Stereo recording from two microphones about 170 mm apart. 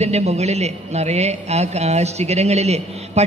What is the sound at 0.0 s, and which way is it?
A man's voice, 40° right (ahead or behind).